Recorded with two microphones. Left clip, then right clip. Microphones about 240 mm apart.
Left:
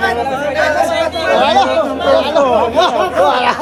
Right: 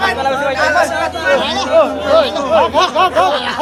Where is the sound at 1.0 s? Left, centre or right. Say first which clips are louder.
Left 2 dB; centre.